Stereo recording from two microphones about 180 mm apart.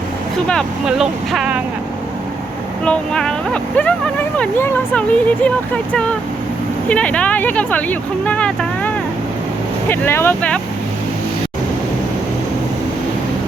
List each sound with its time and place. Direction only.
0.4 s speech: centre (ahead or behind)
2.8 s speech: 5° left (ahead or behind)
9.9 s speech: 15° left (ahead or behind)